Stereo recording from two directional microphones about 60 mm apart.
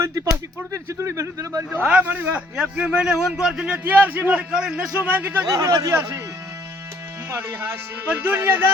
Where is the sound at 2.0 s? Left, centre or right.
Right.